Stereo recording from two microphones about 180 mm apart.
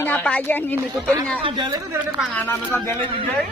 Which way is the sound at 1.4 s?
25° right (ahead or behind).